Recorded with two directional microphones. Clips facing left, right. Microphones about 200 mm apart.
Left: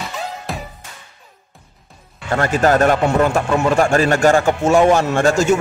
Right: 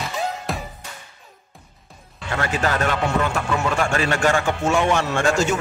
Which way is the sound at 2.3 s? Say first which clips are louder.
Left 8 dB; 45° left (ahead or behind).